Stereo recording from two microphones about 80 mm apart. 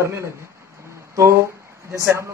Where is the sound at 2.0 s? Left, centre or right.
Right.